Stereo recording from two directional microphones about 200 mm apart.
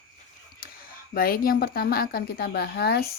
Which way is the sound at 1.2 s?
45° left (ahead or behind).